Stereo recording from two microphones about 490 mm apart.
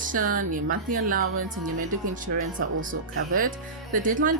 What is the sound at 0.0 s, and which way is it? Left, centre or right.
Speech, centre.